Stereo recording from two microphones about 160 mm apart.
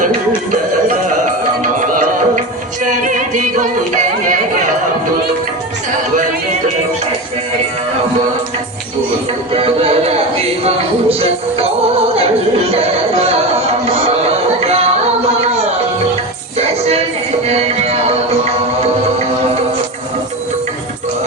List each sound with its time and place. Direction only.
0.5 s music: 50° right (ahead or behind)
9.5 s speech: 35° right (ahead or behind)
11.1 s music: 40° right (ahead or behind)
14.6 s music: 40° right (ahead or behind)
17.4 s music: 40° right (ahead or behind)